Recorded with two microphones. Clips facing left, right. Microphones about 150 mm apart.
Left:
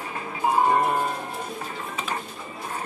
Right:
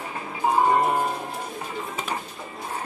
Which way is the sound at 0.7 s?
15° right (ahead or behind).